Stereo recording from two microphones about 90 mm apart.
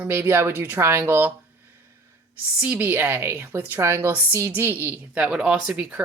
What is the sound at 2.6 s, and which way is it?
Speech, 15° right (ahead or behind).